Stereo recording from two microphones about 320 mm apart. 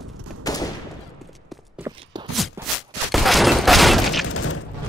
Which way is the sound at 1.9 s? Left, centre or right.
Centre.